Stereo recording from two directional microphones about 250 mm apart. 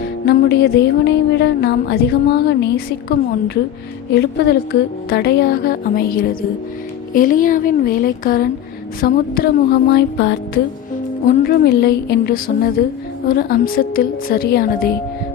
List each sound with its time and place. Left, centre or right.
0.3 s a woman's voice: left